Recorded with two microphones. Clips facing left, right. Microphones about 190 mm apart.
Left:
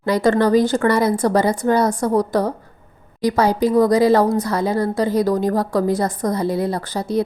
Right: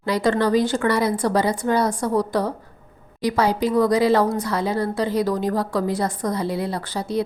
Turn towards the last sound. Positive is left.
turn(degrees=45)  # may be behind; listen again after turning